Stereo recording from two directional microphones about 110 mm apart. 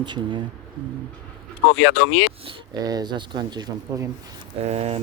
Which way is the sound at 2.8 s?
40° right (ahead or behind).